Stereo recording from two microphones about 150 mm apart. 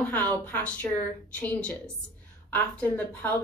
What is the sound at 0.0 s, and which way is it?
A woman's voice, 10° left (ahead or behind).